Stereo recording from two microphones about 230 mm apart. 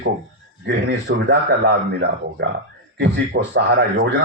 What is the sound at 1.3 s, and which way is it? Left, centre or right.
Speech, right.